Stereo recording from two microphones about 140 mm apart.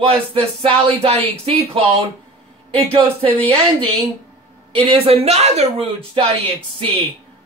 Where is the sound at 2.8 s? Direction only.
40° right (ahead or behind).